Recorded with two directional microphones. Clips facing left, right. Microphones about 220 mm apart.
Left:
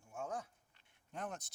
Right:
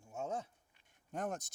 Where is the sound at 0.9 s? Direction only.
45° right (ahead or behind).